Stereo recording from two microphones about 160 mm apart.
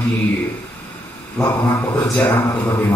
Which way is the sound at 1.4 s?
20° left (ahead or behind).